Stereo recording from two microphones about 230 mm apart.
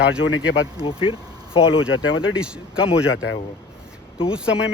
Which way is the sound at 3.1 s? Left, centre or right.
Left.